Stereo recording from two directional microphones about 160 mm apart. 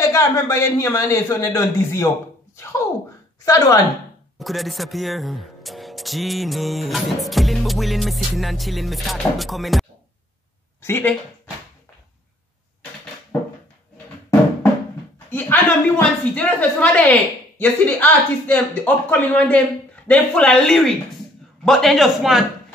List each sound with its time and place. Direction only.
0.1 s a man's voice: 20° left (ahead or behind)
3.4 s a man's voice: 20° left (ahead or behind)
4.4 s speech: centre (ahead or behind)
10.8 s speech: 15° left (ahead or behind)
15.2 s speech: 15° left (ahead or behind)